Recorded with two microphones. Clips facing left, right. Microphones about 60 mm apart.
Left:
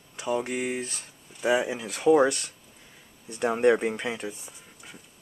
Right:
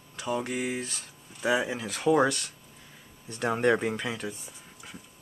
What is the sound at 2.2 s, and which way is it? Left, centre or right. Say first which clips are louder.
Speech: left 2 dB; left.